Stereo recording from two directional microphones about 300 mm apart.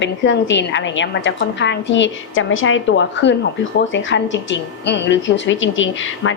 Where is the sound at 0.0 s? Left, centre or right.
Left.